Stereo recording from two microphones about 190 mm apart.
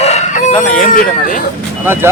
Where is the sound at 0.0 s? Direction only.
35° left (ahead or behind).